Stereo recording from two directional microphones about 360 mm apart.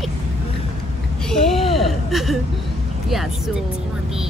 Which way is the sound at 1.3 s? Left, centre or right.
Centre.